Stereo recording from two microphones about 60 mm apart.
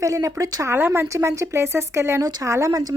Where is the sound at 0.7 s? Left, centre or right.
Right.